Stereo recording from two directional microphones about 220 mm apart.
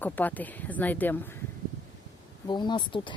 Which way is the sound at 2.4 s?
20° left (ahead or behind).